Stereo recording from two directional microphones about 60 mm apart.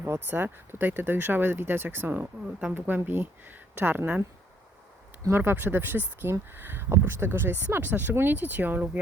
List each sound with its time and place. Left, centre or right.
0.0 s speech: right
5.3 s speech: right